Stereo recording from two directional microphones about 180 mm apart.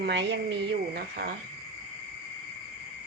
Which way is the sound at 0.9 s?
60° right (ahead or behind).